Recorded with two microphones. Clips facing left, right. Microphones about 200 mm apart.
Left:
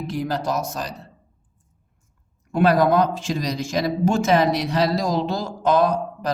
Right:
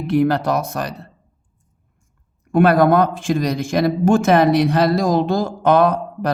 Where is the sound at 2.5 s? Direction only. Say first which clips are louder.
Right 4 dB; 55° right (ahead or behind).